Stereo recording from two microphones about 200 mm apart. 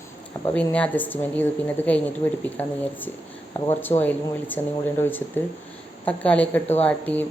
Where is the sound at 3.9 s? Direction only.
20° left (ahead or behind).